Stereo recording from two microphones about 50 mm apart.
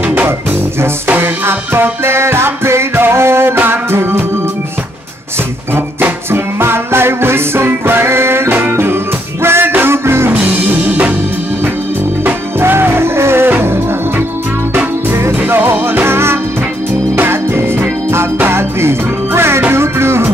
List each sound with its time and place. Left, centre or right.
1.0 s music: right
5.9 s music: right
6.6 s music: right
8.5 s music: right
9.4 s music: right
10.3 s music: right
12.5 s music: right
15.4 s music: right